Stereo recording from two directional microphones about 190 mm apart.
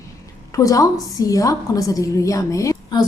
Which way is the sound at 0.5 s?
15° left (ahead or behind).